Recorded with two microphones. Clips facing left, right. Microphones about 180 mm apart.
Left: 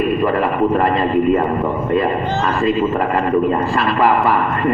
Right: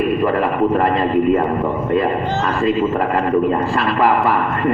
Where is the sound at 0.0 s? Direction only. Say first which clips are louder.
Even; 60° right (ahead or behind).